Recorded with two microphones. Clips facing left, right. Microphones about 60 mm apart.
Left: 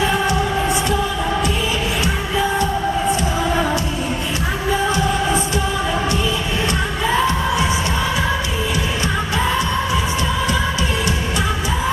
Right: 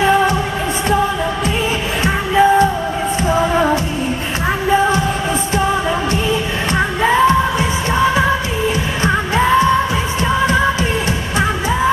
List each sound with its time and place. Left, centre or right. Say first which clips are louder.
2.0 s music: right 12 dB; right
9.0 s music: right 8 dB; right